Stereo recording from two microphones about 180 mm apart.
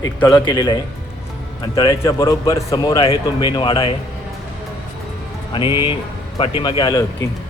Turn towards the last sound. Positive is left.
turn(degrees=20)  # may be behind; listen again after turning